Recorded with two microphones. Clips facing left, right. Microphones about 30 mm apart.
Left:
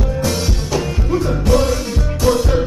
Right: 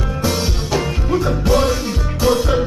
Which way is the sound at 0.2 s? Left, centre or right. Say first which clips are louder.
Right 3 dB; centre.